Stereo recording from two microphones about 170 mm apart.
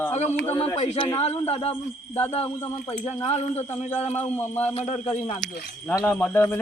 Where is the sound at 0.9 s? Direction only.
30° left (ahead or behind).